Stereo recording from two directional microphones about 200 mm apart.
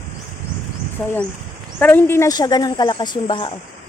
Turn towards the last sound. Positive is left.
turn(degrees=25)  # may be behind; listen again after turning